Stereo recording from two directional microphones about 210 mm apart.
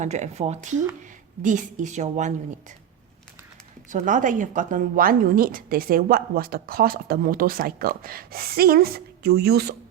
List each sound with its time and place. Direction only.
0.0 s a woman's voice: 35° right (ahead or behind)
3.8 s a woman's voice: 40° right (ahead or behind)